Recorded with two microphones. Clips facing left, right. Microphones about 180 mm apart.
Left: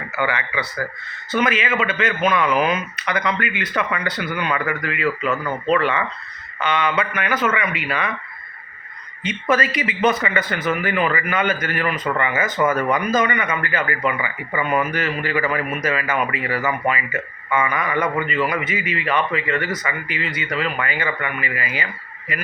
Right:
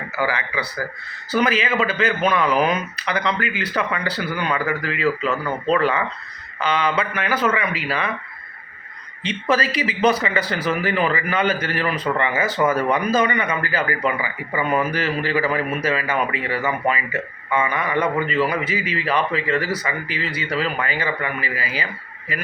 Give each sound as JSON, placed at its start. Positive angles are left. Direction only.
{"t": 0.2, "sound": "speech", "side_deg": -35}
{"t": 5.2, "sound": "speech", "side_deg": 5}
{"t": 5.7, "sound": "speech", "side_deg": -35}
{"t": 9.2, "sound": "speech", "side_deg": -30}